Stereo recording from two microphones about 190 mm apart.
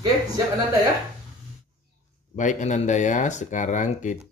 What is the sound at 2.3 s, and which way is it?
Speech, 40° left (ahead or behind).